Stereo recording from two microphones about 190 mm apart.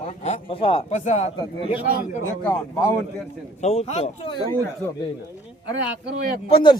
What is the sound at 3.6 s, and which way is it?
Speech, 35° left (ahead or behind).